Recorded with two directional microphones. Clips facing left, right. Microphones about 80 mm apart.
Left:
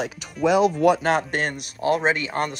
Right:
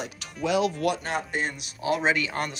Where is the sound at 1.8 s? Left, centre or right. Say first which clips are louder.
Left 3 dB; left.